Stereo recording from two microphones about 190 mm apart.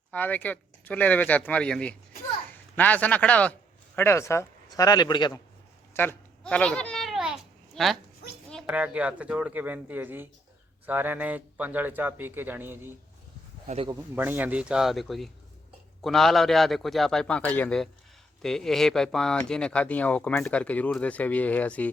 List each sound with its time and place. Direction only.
0.1 s a man's voice: 10° left (ahead or behind)
5.9 s a sound: 10° left (ahead or behind)
7.8 s a man's voice: centre (ahead or behind)
13.7 s speech: 30° right (ahead or behind)
14.2 s a man's voice: 10° right (ahead or behind); by 21.8 s 10° left (ahead or behind)